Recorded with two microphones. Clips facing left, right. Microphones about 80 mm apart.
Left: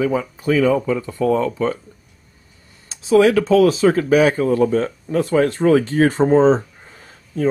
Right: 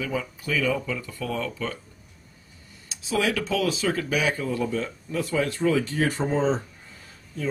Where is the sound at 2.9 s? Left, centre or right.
Left.